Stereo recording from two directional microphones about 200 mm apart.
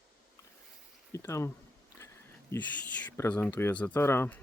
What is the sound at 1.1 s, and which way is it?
Speech, 15° left (ahead or behind).